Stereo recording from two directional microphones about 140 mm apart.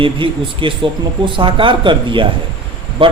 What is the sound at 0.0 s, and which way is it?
A man's voice, 40° right (ahead or behind).